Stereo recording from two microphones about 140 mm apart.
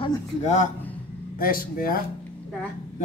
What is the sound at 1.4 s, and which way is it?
Speech, 90° left.